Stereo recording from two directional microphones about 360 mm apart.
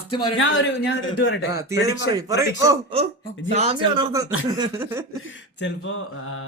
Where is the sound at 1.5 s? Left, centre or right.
Centre.